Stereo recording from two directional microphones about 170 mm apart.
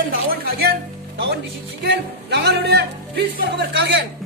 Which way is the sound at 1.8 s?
85° right.